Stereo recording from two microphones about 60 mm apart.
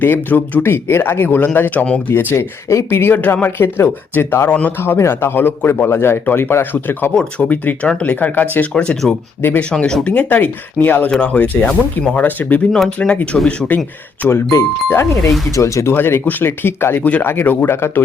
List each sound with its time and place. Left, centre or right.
0.0 s a man's voice: left
2.0 s a man's voice: left
3.2 s a man's voice: left
4.4 s speech: left
4.8 s a man's voice: left
7.2 s speech: centre
7.5 s speech: left
14.5 s speech: left
15.5 s speech: left
15.9 s a man's voice: left
17.0 s a man's voice: left